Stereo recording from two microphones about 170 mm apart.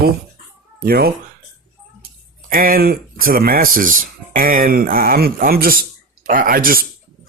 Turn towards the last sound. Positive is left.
turn(degrees=-60)  # may be behind; listen again after turning